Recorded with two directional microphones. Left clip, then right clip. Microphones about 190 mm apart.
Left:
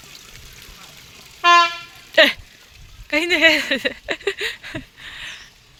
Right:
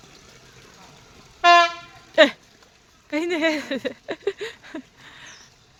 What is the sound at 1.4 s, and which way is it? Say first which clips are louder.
Vehicle: left 1 dB; 10° right (ahead or behind).